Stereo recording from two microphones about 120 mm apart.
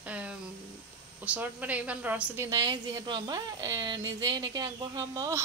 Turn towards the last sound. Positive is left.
turn(degrees=-30)  # may be behind; listen again after turning